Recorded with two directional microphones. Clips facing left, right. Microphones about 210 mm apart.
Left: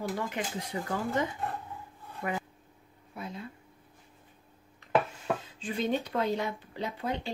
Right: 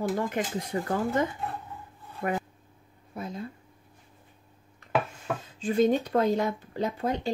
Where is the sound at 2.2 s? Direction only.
50° right (ahead or behind).